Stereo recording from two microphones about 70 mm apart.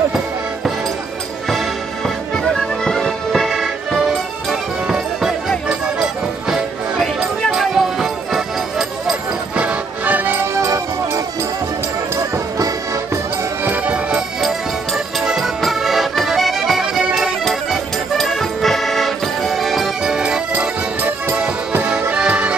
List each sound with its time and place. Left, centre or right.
2.0 s music: centre
9.6 s music: centre
13.7 s music: centre
15.1 s accordion: centre
20.5 s music: right